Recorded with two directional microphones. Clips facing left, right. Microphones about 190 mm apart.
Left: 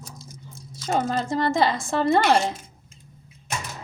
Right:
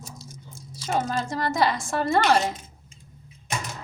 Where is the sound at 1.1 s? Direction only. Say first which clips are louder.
Left 3 dB; 25° left (ahead or behind).